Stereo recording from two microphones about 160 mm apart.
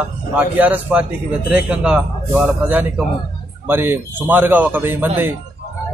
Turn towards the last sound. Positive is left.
turn(degrees=-15)  # may be behind; listen again after turning